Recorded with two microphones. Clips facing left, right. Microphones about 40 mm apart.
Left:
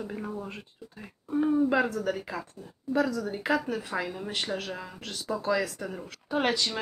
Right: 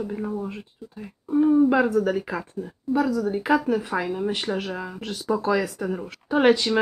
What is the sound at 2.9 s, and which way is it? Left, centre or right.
Speech, centre.